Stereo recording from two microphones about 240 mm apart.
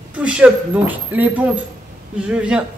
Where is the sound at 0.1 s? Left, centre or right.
Centre.